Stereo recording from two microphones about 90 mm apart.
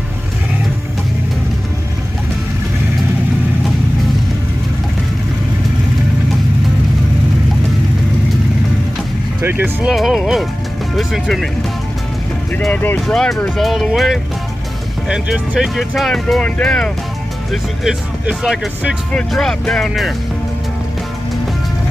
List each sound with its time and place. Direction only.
9.4 s speech: 25° right (ahead or behind)
9.8 s speech: 5° right (ahead or behind)
12.7 s speech: 20° left (ahead or behind)
13.0 s speech: 5° left (ahead or behind)
18.2 s speech: 5° right (ahead or behind)
19.1 s speech: 10° left (ahead or behind)